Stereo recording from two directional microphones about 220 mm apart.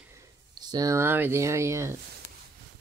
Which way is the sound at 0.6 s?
15° right (ahead or behind).